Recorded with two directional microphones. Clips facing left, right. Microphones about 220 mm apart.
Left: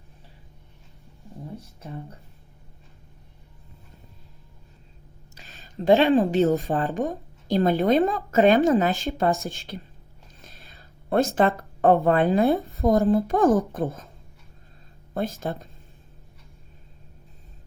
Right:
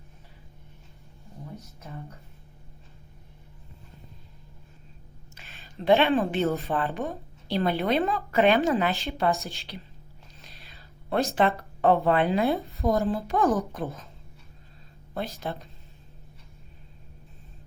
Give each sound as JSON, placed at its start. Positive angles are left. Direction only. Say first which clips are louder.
{"t": 1.5, "sound": "speech", "louder": "left 4 dB", "side_deg": 30}
{"t": 5.3, "sound": "a sound", "louder": "left 2 dB", "side_deg": 40}
{"t": 6.1, "sound": "speech", "louder": "left 5 dB", "side_deg": 30}
{"t": 6.5, "sound": "a woman's voice", "louder": "left 4 dB", "side_deg": 45}
{"t": 10.4, "sound": "a sound", "louder": "left 3 dB", "side_deg": 45}
{"t": 11.3, "sound": "a woman's voice", "louder": "left 3 dB", "side_deg": 45}
{"t": 15.1, "sound": "a woman's voice", "louder": "left 5 dB", "side_deg": 50}